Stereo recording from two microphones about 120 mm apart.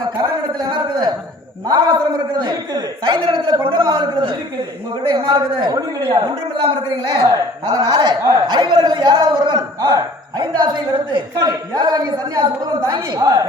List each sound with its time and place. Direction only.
0.2 s a man's voice: 35° right (ahead or behind)